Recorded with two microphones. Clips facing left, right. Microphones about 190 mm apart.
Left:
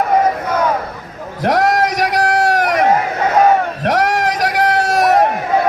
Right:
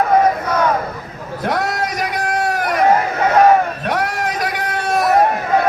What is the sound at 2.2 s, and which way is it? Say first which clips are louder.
Run: left 4 dB; 90° left.